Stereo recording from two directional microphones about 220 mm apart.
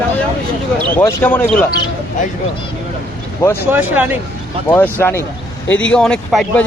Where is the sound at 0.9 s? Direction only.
10° left (ahead or behind).